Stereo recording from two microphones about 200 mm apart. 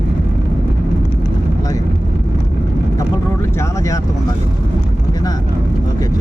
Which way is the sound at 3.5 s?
15° left (ahead or behind).